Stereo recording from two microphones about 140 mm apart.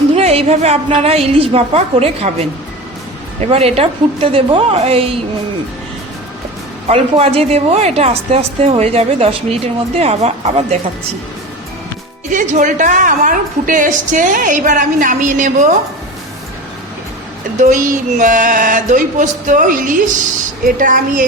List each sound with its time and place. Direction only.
0.2 s speech: 50° right (ahead or behind)
6.8 s speech: 45° right (ahead or behind)
12.3 s a woman's voice: 65° right (ahead or behind)
17.6 s a woman's voice: 65° right (ahead or behind)